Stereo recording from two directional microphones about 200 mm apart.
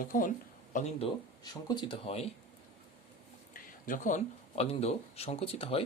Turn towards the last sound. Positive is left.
turn(degrees=30)  # may be behind; listen again after turning